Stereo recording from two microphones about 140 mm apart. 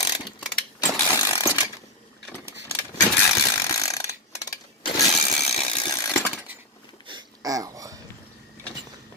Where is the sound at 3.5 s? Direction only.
25° left (ahead or behind).